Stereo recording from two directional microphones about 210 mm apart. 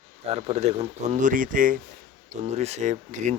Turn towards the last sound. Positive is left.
turn(degrees=-35)  # may be behind; listen again after turning